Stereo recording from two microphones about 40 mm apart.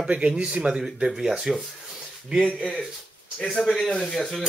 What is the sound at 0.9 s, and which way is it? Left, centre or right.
Speech, right.